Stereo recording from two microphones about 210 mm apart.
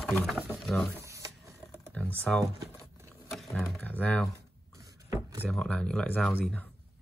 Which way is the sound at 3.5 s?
5° left (ahead or behind).